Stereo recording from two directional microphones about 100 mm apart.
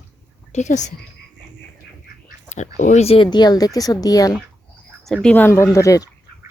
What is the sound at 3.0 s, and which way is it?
Speech, 85° left.